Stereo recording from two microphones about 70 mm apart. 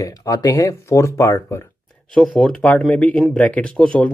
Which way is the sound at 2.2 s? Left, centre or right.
Centre.